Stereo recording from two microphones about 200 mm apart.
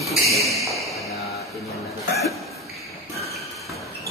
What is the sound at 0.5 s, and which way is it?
Speech, centre (ahead or behind).